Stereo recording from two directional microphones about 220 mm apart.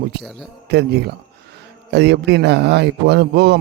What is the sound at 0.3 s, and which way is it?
A man's voice, 50° right (ahead or behind).